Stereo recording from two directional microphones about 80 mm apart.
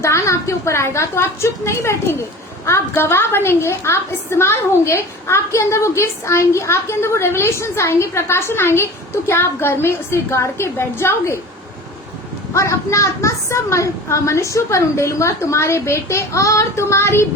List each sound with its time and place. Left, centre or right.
0.0 s a woman's voice: left
12.5 s a woman's voice: left